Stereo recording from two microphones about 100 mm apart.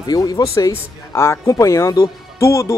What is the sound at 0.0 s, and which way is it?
Speech, 40° left (ahead or behind).